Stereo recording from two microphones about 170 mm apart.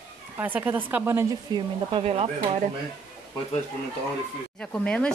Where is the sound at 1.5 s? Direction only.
30° right (ahead or behind).